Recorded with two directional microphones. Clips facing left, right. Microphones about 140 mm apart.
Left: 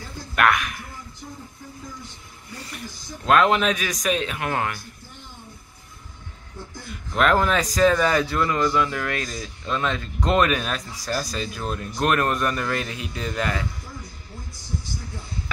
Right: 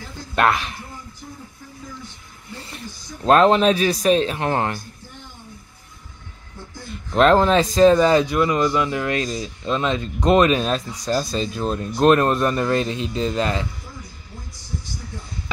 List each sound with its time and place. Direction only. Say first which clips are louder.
0.4 s speech: right 2 dB; 30° right (ahead or behind)
2.5 s a sound: right 1 dB; 25° right (ahead or behind)
3.3 s speech: right 4 dB; 35° right (ahead or behind)
7.2 s speech: right 5 dB; 30° right (ahead or behind)